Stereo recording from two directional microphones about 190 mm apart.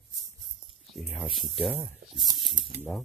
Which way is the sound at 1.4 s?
Centre (ahead or behind).